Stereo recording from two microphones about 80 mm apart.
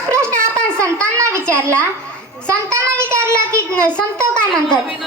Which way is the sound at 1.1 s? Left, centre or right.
Right.